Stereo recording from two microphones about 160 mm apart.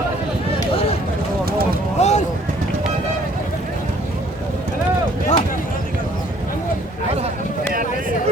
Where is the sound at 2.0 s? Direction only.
45° left (ahead or behind).